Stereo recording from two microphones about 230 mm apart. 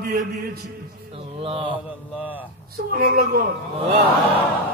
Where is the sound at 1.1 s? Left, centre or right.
Right.